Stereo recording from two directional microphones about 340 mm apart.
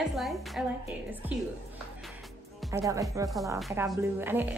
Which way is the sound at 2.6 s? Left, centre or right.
Centre.